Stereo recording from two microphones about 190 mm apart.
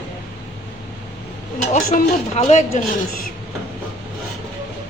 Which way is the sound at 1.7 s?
40° left (ahead or behind).